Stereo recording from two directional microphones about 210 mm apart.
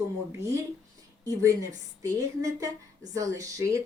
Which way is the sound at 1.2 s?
15° right (ahead or behind).